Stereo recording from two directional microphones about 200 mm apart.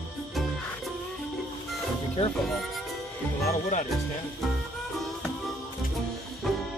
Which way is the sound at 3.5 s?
35° left (ahead or behind).